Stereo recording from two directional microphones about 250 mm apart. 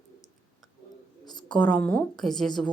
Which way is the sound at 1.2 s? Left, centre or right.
Centre.